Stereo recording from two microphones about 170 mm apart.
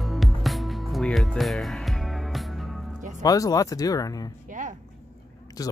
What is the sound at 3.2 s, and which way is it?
Speech, 20° left (ahead or behind).